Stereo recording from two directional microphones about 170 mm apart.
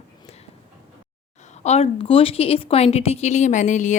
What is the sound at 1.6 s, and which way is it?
Speech, 40° left (ahead or behind).